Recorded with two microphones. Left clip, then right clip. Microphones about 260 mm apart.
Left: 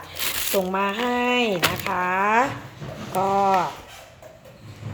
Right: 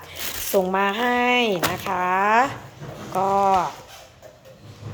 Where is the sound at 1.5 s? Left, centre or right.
Right.